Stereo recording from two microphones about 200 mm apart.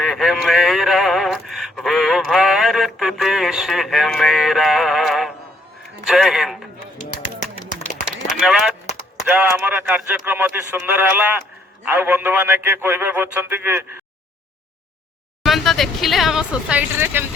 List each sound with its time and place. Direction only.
0.0 s a sound: centre (ahead or behind)
6.1 s a man's voice: centre (ahead or behind)
7.8 s run: 35° left (ahead or behind)
8.4 s a man's voice: 5° right (ahead or behind)
15.4 s speech: centre (ahead or behind)